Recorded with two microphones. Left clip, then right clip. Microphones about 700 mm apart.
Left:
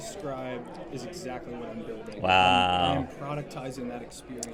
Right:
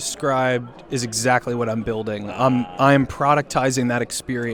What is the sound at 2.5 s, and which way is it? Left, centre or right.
Speech, left.